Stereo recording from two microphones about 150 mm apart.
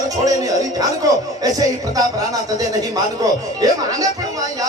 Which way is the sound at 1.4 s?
25° right (ahead or behind).